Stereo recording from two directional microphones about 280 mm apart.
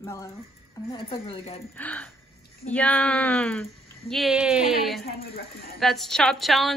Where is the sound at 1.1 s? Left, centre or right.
Centre.